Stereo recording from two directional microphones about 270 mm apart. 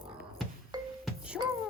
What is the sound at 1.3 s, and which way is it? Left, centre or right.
Music, centre.